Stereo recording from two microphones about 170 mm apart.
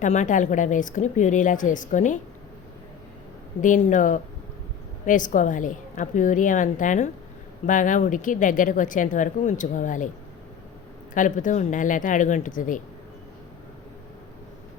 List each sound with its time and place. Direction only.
0.0 s speech: 45° left (ahead or behind)
3.6 s speech: 50° left (ahead or behind)
11.1 s speech: 50° left (ahead or behind)